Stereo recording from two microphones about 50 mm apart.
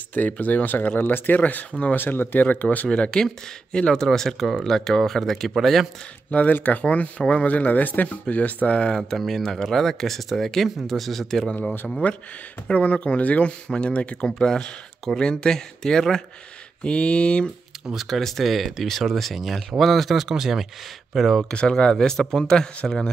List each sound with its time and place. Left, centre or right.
0.1 s speech: left
2.0 s speech: left
2.9 s speech: centre
6.6 s speech: left
9.2 s speech: centre
12.0 s speech: left; by 16.2 s centre
16.8 s speech: left
17.8 s speech: centre
21.5 s speech: centre